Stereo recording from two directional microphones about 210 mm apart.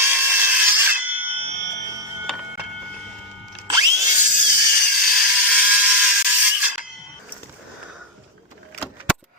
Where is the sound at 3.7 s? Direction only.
15° right (ahead or behind).